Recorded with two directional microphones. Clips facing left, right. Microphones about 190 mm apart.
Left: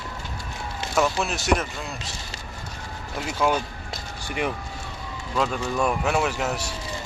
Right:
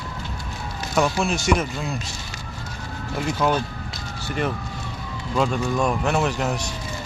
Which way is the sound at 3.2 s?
5° left (ahead or behind).